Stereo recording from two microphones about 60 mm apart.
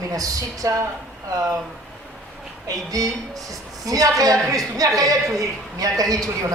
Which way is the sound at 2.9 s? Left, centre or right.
Right.